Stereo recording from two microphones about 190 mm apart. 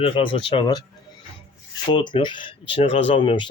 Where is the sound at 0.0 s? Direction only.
25° left (ahead or behind).